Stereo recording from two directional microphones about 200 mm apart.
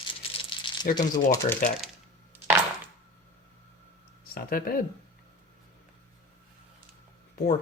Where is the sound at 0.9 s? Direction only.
15° left (ahead or behind).